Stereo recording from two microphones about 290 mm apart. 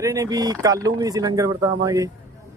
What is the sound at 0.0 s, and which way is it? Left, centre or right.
Speech, centre.